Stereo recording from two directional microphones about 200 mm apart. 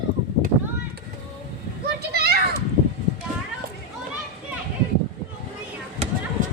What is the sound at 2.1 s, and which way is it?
Children playing, 50° right (ahead or behind).